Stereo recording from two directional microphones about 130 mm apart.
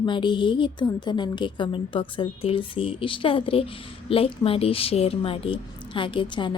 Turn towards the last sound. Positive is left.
turn(degrees=35)  # may be behind; listen again after turning